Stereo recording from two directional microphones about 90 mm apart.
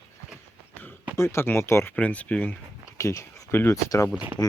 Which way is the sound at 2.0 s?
15° left (ahead or behind).